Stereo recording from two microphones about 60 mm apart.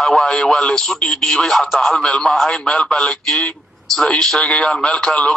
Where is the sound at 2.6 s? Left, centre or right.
Centre.